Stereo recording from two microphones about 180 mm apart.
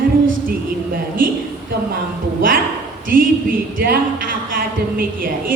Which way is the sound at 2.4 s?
50° right (ahead or behind).